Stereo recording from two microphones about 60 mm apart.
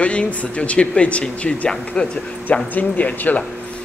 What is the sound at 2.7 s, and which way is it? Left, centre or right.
Speech, left.